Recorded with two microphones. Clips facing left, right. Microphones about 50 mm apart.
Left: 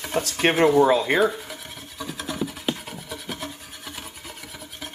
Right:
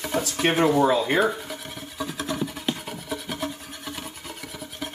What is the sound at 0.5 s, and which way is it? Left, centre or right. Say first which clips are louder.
Speech: left 3 dB; centre.